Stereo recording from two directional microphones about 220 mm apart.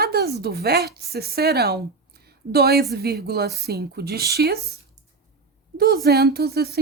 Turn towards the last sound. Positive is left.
turn(degrees=-45)  # may be behind; listen again after turning